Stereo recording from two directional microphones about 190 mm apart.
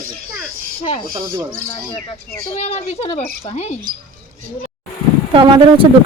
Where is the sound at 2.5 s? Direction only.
35° left (ahead or behind).